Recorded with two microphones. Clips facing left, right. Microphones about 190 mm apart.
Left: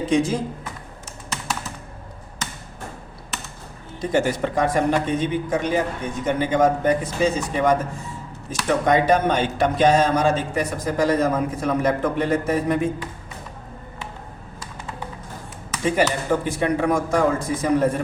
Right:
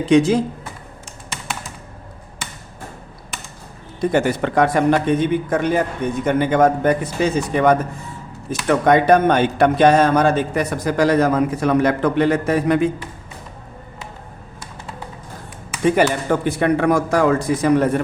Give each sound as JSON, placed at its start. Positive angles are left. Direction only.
{"t": 0.0, "sound": "speech", "side_deg": -75}
{"t": 4.0, "sound": "speech", "side_deg": -60}
{"t": 15.9, "sound": "speech", "side_deg": -60}